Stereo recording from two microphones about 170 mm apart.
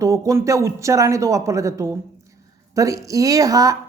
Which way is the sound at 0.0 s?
20° right (ahead or behind).